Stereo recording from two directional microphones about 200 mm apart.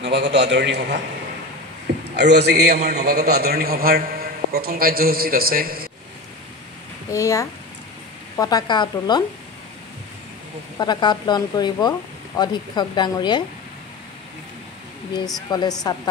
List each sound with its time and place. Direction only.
0.0 s a man's voice: 60° right (ahead or behind)
2.0 s a man's voice: 55° right (ahead or behind)
7.1 s speech: 15° left (ahead or behind)
10.8 s speech: 20° left (ahead or behind)
15.1 s speech: 20° left (ahead or behind)